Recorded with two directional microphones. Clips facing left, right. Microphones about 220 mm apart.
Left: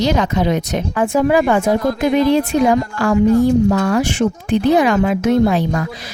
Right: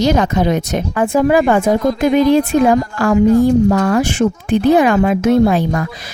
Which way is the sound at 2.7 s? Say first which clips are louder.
Right 2 dB; 45° right (ahead or behind).